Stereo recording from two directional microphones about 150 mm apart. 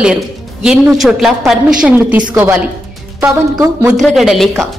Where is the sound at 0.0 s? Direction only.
5° right (ahead or behind).